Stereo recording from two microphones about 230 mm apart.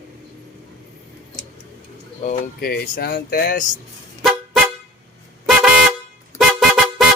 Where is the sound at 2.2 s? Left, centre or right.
Left.